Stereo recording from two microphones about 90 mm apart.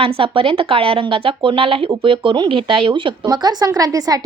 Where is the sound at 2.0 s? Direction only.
70° right (ahead or behind).